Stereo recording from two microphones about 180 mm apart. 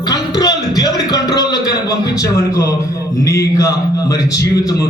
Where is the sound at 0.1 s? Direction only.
20° left (ahead or behind).